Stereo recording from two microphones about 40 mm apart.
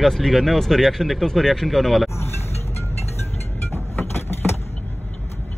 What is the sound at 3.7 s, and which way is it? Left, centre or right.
Vehicle, left.